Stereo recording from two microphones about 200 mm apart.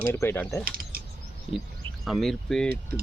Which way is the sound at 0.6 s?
45° right (ahead or behind).